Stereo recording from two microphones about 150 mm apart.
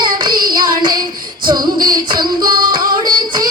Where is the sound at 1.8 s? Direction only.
30° right (ahead or behind).